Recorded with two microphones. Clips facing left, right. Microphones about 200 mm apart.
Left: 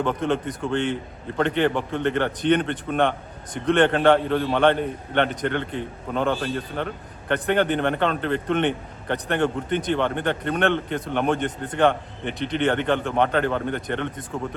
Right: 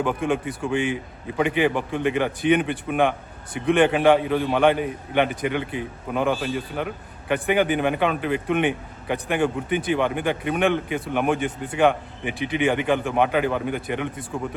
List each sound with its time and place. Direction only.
0.0 s a man's voice: 10° right (ahead or behind)